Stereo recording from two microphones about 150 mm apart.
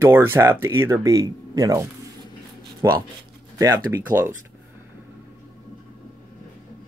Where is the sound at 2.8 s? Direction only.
20° right (ahead or behind).